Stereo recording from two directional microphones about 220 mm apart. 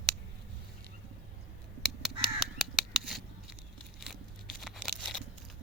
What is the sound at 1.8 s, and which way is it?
Crow, centre (ahead or behind).